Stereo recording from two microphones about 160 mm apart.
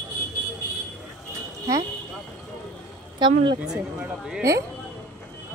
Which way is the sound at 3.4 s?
30° right (ahead or behind).